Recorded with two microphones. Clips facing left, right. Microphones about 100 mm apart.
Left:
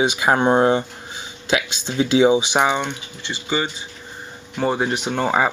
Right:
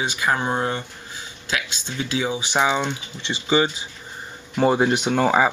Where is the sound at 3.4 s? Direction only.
15° right (ahead or behind).